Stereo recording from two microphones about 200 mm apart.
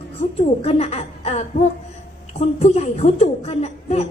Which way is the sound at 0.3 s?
30° left (ahead or behind).